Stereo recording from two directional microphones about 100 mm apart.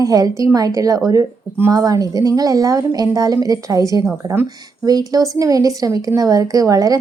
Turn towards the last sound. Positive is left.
turn(degrees=-35)  # may be behind; listen again after turning